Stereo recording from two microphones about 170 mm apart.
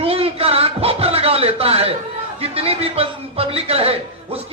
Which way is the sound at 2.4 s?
35° right (ahead or behind).